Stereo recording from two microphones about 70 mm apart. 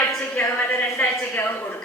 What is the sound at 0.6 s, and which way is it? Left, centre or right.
Speech, left.